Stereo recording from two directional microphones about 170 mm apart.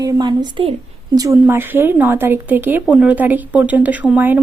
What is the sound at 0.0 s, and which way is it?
A woman's voice, 25° right (ahead or behind).